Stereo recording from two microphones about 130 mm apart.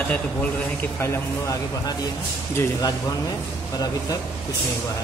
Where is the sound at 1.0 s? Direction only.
25° left (ahead or behind).